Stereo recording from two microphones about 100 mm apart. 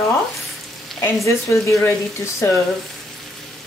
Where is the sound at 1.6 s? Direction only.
30° left (ahead or behind).